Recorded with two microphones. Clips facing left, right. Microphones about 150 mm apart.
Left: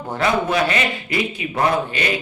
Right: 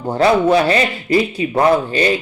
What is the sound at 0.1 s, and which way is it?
A man's voice, 30° right (ahead or behind).